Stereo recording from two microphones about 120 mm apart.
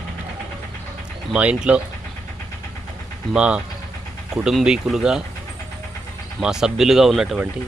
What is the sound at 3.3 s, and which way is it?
Speech, 10° right (ahead or behind).